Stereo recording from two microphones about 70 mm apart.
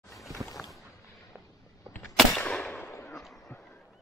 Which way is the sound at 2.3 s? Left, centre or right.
Centre.